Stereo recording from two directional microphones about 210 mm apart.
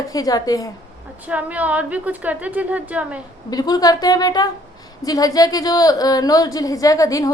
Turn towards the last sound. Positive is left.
turn(degrees=15)  # may be behind; listen again after turning